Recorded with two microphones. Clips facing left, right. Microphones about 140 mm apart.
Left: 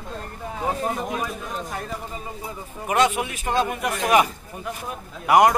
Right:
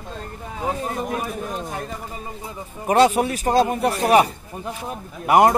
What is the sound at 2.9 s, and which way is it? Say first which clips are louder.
Speech: right 5 dB; 35° right (ahead or behind).